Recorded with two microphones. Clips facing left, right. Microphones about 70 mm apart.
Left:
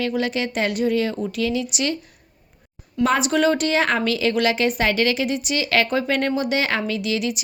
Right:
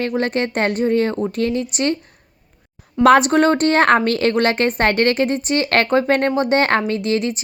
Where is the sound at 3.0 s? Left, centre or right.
Right.